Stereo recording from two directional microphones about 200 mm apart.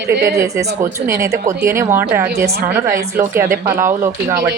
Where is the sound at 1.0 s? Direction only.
15° right (ahead or behind).